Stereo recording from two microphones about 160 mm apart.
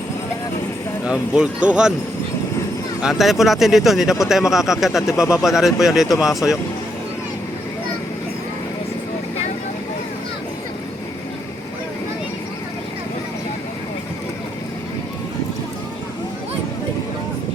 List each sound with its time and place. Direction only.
1.0 s speech: 5° right (ahead or behind)
3.0 s speech: centre (ahead or behind)